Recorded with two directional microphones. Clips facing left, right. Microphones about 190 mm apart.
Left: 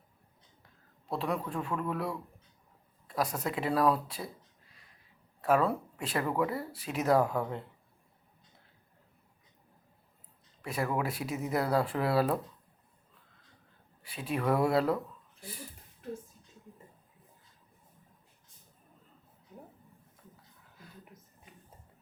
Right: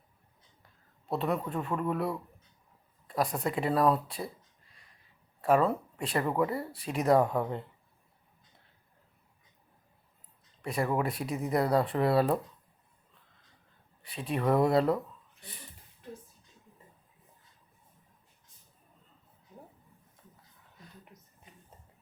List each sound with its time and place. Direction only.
1.0 s speech: 5° right (ahead or behind)
10.6 s speech: 5° left (ahead or behind)
14.2 s speech: 5° left (ahead or behind)